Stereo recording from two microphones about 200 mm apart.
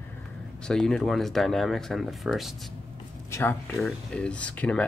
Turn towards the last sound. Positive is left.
turn(degrees=5)  # may be behind; listen again after turning